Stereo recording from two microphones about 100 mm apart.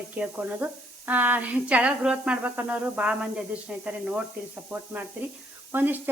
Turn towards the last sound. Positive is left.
turn(degrees=-20)  # may be behind; listen again after turning